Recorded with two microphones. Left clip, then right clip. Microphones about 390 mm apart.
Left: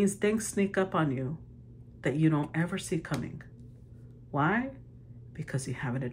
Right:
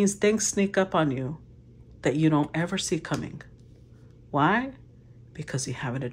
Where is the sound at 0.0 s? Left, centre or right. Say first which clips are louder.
Right 5 dB; centre.